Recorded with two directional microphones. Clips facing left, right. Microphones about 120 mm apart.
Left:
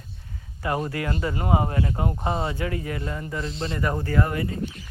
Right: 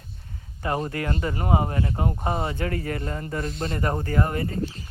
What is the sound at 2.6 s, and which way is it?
Speech, 45° right (ahead or behind).